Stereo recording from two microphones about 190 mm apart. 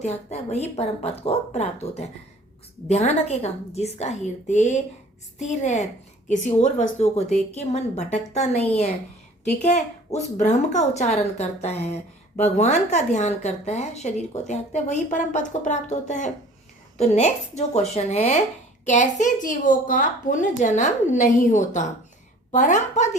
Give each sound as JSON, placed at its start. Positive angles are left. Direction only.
{"t": 0.0, "sound": "a woman's voice", "side_deg": 35}